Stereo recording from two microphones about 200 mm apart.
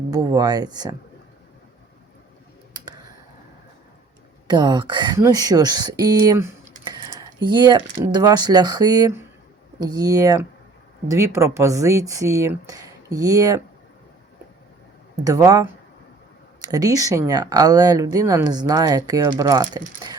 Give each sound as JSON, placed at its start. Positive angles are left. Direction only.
{"t": 0.1, "sound": "speech", "side_deg": -20}
{"t": 4.4, "sound": "speech", "side_deg": -20}
{"t": 15.1, "sound": "speech", "side_deg": -15}